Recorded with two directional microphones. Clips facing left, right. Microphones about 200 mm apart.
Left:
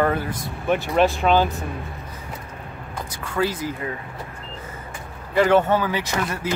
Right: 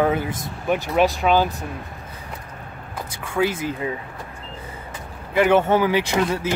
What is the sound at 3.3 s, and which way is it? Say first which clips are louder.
Speech: right 2 dB; 25° right (ahead or behind).